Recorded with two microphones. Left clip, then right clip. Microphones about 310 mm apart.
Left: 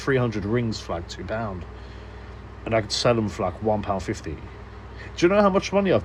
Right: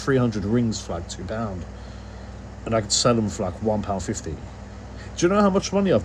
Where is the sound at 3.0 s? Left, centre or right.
Left.